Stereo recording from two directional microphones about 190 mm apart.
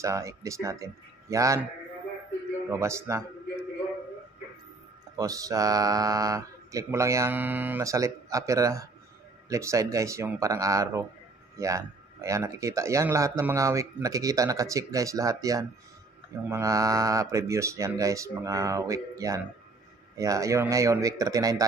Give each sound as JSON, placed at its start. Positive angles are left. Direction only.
{"t": 0.0, "sound": "speech", "side_deg": -15}
{"t": 2.7, "sound": "speech", "side_deg": -15}
{"t": 5.1, "sound": "speech", "side_deg": -20}